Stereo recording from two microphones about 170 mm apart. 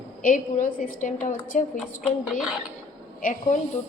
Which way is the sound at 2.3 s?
Centre (ahead or behind).